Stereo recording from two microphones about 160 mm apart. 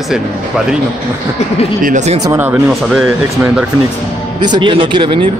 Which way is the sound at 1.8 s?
50° right (ahead or behind).